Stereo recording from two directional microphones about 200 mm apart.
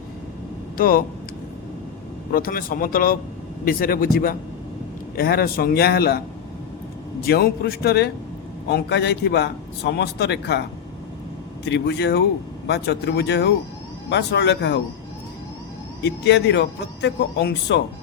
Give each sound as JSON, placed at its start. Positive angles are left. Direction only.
{"t": 0.8, "sound": "a man's voice", "side_deg": 45}
{"t": 2.3, "sound": "a man's voice", "side_deg": 45}
{"t": 11.6, "sound": "a man's voice", "side_deg": 55}
{"t": 16.0, "sound": "a man's voice", "side_deg": 60}